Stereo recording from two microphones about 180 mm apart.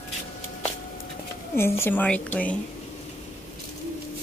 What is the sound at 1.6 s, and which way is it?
A woman's voice, 15° left (ahead or behind).